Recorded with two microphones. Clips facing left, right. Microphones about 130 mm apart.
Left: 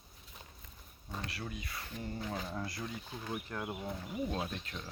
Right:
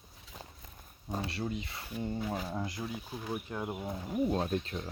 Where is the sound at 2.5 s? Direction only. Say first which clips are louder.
Right 3 dB; 20° right (ahead or behind).